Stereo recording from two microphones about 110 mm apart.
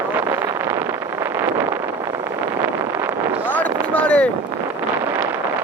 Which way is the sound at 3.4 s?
15° left (ahead or behind).